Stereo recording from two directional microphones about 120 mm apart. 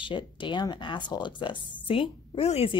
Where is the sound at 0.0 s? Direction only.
40° left (ahead or behind).